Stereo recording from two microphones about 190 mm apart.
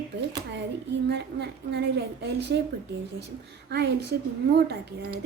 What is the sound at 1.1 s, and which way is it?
Speech, 65° right (ahead or behind).